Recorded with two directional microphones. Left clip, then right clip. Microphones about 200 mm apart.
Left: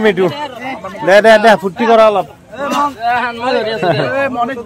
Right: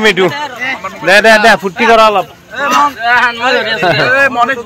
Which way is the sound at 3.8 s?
25° right (ahead or behind).